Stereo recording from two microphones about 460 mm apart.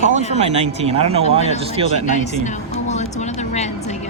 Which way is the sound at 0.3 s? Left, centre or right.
Centre.